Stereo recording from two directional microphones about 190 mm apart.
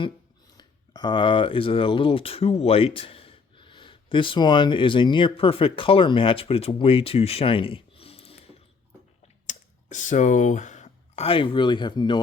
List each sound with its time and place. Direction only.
0.5 s speech: 20° left (ahead or behind)
9.5 s speech: 40° left (ahead or behind); by 12.2 s 25° left (ahead or behind)